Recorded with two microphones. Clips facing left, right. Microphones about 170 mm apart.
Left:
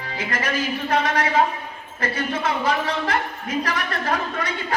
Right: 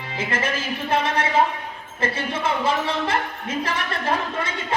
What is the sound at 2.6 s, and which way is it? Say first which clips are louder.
Speech: even; 25° right (ahead or behind).